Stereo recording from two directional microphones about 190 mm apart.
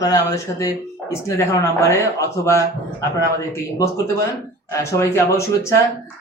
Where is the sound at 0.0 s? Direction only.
20° left (ahead or behind).